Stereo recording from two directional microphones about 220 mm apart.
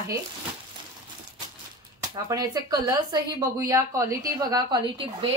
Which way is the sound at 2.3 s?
15° right (ahead or behind).